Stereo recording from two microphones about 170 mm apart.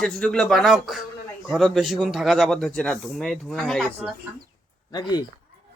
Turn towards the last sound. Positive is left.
turn(degrees=25)  # may be behind; listen again after turning